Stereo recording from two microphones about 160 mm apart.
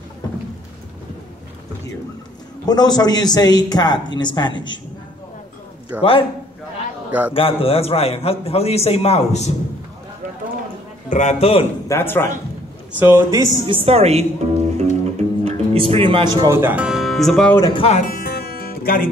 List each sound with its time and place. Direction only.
2.6 s a man's voice: 25° left (ahead or behind)
5.9 s a man's voice: 10° right (ahead or behind)
7.3 s a man's voice: 35° left (ahead or behind)
11.1 s a man's voice: 50° left (ahead or behind)
11.9 s speech: 15° left (ahead or behind)
13.0 s speech: 15° right (ahead or behind)
13.6 s music: 30° right (ahead or behind)
16.3 s speech: 15° right (ahead or behind); by 17.6 s 5° left (ahead or behind)
17.6 s a man's voice: 25° left (ahead or behind)
17.8 s music: 50° left (ahead or behind); by 19.0 s 70° left (ahead or behind)